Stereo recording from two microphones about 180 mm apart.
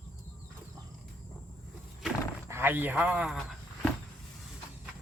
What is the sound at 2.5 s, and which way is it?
A man's voice, 10° right (ahead or behind).